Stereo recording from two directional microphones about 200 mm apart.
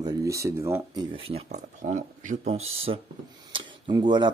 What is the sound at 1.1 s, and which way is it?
Speech, 25° right (ahead or behind).